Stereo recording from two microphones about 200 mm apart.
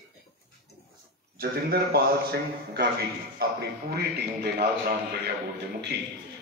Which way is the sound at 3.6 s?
50° right (ahead or behind).